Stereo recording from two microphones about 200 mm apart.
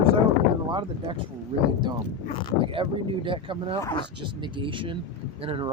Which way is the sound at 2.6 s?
25° right (ahead or behind).